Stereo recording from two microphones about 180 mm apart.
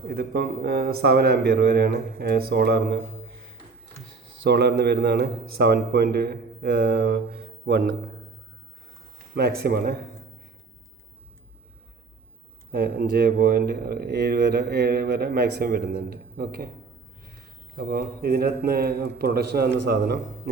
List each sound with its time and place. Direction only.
0.1 s speech: 60° right (ahead or behind)
4.4 s speech: 65° right (ahead or behind)
9.3 s speech: 60° right (ahead or behind)
12.7 s speech: 55° right (ahead or behind)
17.7 s speech: 55° right (ahead or behind)